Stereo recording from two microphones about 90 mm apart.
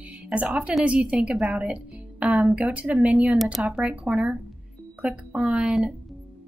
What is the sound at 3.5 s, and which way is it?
A woman's voice, 5° right (ahead or behind).